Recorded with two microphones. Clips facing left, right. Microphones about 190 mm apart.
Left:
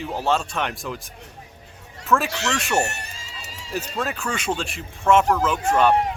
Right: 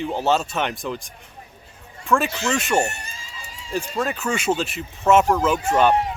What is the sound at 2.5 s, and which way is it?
Speech, centre (ahead or behind).